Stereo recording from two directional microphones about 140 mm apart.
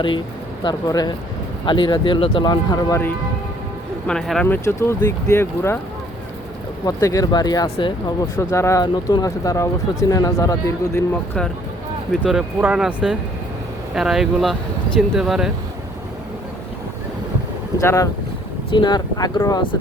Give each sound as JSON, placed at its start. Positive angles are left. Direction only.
{"t": 0.6, "sound": "speech", "side_deg": 30}
{"t": 4.0, "sound": "speech", "side_deg": 5}
{"t": 6.8, "sound": "speech", "side_deg": 25}
{"t": 8.4, "sound": "speech", "side_deg": 20}
{"t": 12.2, "sound": "speech", "side_deg": -5}
{"t": 17.7, "sound": "speech", "side_deg": 25}
{"t": 18.7, "sound": "speech", "side_deg": 35}